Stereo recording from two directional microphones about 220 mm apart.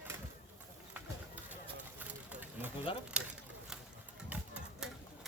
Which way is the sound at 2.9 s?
25° left (ahead or behind).